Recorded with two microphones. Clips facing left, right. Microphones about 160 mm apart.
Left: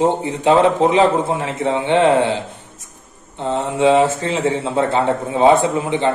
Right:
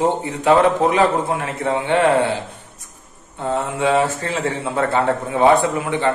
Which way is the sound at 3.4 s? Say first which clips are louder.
Left 4 dB; 25° left (ahead or behind).